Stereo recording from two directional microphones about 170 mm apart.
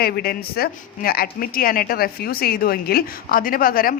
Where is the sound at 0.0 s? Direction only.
65° left (ahead or behind).